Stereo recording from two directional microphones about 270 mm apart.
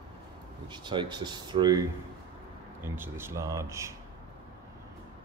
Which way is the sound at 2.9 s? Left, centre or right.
Centre.